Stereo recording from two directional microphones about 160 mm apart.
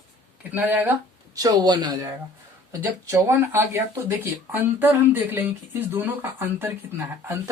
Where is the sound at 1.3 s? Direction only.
25° right (ahead or behind).